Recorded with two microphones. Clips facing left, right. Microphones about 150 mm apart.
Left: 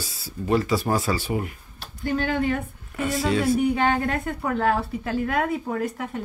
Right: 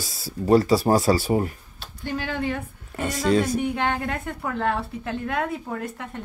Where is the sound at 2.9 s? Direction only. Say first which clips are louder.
Right 2 dB; 40° right (ahead or behind).